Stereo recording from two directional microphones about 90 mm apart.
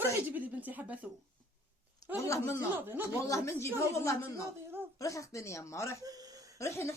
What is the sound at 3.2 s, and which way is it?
Speech, 35° left (ahead or behind).